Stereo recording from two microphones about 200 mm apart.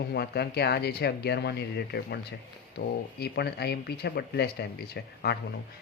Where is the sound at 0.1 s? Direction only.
55° left (ahead or behind).